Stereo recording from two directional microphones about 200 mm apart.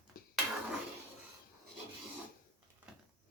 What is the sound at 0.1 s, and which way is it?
Cutlery, 45° left (ahead or behind).